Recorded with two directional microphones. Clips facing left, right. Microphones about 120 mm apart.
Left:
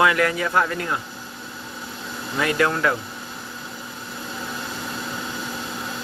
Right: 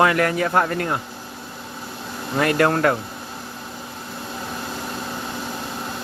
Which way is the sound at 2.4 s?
50° right (ahead or behind).